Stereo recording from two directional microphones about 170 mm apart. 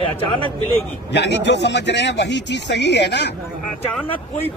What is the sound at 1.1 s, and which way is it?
Speech, 90° left.